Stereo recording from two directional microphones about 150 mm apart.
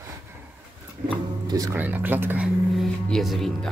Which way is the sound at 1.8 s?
10° right (ahead or behind).